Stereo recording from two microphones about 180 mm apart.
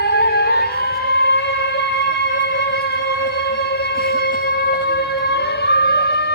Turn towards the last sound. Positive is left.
turn(degrees=65)  # may be behind; listen again after turning